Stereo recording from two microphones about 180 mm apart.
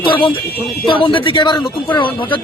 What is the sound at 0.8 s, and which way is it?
Speech, 30° left (ahead or behind).